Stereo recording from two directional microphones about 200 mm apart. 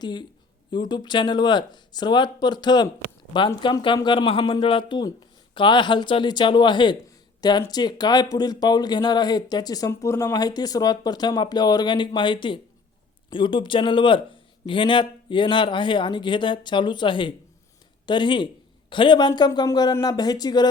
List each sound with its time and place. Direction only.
0.0 s speech: 20° left (ahead or behind)